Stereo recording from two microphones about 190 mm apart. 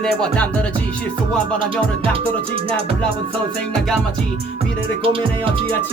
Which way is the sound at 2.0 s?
30° right (ahead or behind).